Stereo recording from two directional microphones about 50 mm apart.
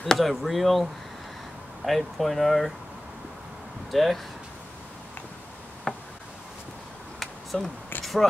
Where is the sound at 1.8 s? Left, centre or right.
Centre.